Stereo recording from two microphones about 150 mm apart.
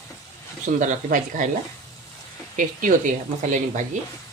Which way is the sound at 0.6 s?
55° right (ahead or behind).